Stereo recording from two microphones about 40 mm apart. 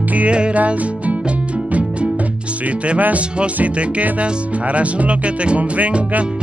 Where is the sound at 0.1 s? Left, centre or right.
Right.